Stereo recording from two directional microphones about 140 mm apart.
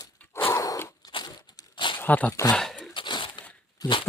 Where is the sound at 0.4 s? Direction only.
25° left (ahead or behind).